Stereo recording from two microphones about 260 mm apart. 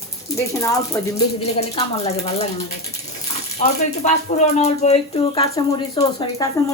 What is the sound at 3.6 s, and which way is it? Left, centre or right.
Speech, left.